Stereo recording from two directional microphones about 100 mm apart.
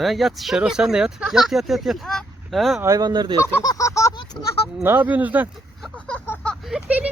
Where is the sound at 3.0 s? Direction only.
45° right (ahead or behind).